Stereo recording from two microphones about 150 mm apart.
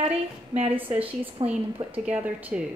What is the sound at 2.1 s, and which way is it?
Speech, 10° right (ahead or behind).